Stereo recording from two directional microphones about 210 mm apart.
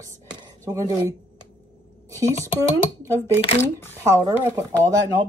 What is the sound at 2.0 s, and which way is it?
Speech, 15° right (ahead or behind).